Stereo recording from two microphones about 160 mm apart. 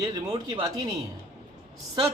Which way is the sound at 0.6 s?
25° right (ahead or behind).